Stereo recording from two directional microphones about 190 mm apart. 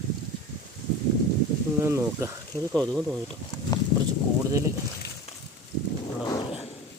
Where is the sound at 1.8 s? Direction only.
15° right (ahead or behind).